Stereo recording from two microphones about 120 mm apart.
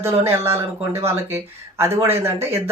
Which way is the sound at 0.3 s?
20° right (ahead or behind).